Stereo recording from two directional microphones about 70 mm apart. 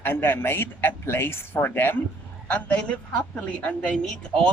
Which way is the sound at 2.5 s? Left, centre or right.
Centre.